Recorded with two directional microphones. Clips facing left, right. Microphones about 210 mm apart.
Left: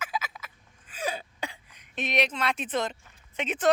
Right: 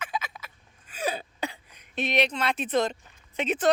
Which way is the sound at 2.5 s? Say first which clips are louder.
Right 4 dB; 35° right (ahead or behind).